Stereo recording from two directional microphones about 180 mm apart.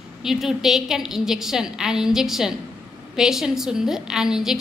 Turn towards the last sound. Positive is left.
turn(degrees=-5)  # may be behind; listen again after turning